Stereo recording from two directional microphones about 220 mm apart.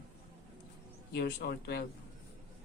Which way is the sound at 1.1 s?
45° left (ahead or behind).